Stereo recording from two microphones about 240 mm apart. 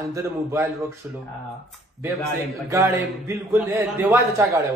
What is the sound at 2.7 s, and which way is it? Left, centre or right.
A man's voice, centre.